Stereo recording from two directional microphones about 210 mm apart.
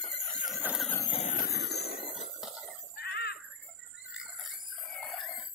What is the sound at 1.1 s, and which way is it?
Vehicle, 30° left (ahead or behind).